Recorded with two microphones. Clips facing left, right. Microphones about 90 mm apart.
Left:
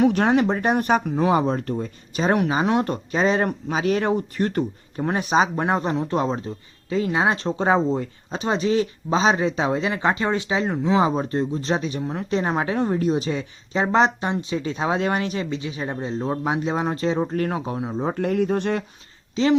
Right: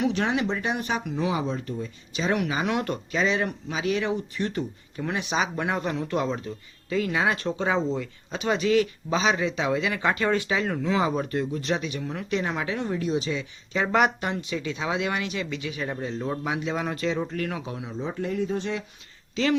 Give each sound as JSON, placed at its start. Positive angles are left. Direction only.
{"t": 0.0, "sound": "speech", "side_deg": 45}
{"t": 18.0, "sound": "speech", "side_deg": 55}
{"t": 19.4, "sound": "speech", "side_deg": 25}